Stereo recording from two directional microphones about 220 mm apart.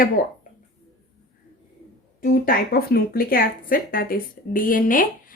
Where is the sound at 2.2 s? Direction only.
40° left (ahead or behind).